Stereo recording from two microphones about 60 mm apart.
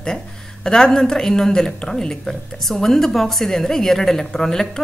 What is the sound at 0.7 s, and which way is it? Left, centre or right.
A woman's voice, centre.